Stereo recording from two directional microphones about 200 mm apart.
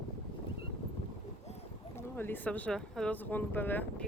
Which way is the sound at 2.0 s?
10° left (ahead or behind).